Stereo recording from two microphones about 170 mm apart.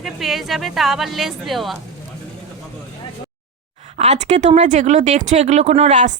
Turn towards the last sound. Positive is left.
turn(degrees=-45)  # may be behind; listen again after turning